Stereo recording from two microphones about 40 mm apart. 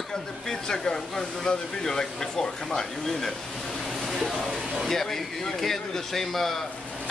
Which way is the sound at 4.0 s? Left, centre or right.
Centre.